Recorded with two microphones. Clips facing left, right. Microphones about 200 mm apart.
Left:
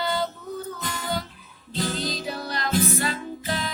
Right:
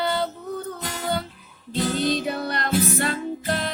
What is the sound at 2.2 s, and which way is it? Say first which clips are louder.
Music: right 4 dB; 60° right (ahead or behind).